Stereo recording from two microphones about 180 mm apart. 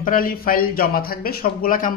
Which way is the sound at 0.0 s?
55° left (ahead or behind).